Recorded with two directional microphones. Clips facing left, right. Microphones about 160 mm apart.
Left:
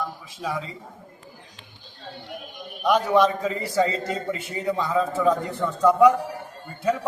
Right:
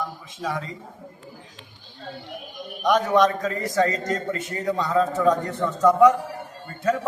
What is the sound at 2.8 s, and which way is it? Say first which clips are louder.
A man's voice: even; 10° left (ahead or behind).